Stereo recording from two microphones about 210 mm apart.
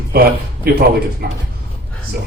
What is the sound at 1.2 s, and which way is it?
Speech, 45° right (ahead or behind).